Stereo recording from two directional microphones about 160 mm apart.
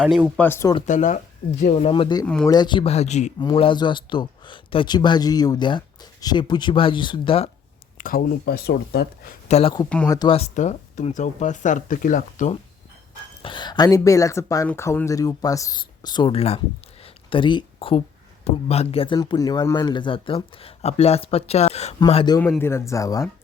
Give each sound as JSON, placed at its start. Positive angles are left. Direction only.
{"t": 0.0, "sound": "speech", "side_deg": -5}
{"t": 0.3, "sound": "speech", "side_deg": 15}
{"t": 0.9, "sound": "speech", "side_deg": 50}
{"t": 1.9, "sound": "speech", "side_deg": 30}
{"t": 2.2, "sound": "speech", "side_deg": 5}
{"t": 2.5, "sound": "speech", "side_deg": 25}
{"t": 3.4, "sound": "speech", "side_deg": 30}
{"t": 7.9, "sound": "speech", "side_deg": 60}
{"t": 9.5, "sound": "speech", "side_deg": 40}
{"t": 10.1, "sound": "speech", "side_deg": 25}
{"t": 10.3, "sound": "speech", "side_deg": 45}
{"t": 13.4, "sound": "speech", "side_deg": 30}
{"t": 22.4, "sound": "speech", "side_deg": 10}